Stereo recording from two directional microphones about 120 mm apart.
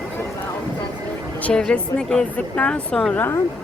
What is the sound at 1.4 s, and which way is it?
A woman's voice, 10° left (ahead or behind).